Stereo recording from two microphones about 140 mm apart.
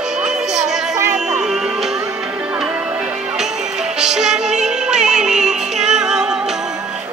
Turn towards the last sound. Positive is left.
turn(degrees=-5)  # may be behind; listen again after turning